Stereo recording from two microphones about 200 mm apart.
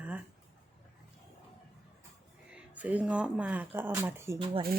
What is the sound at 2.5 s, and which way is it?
Speech, 5° right (ahead or behind).